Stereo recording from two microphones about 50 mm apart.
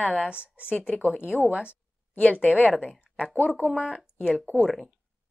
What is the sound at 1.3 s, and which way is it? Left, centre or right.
Speech, centre.